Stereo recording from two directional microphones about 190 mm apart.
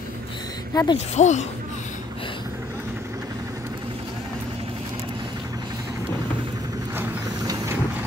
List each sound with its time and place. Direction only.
0.7 s speech: 20° left (ahead or behind)
1.1 s speech: 40° left (ahead or behind)
7.0 s a sound: 15° right (ahead or behind)